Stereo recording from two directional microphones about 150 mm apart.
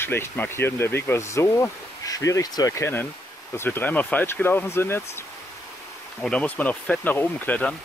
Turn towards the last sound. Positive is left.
turn(degrees=10)  # may be behind; listen again after turning